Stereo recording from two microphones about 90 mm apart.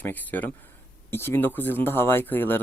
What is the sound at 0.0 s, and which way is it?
Speech, 20° left (ahead or behind).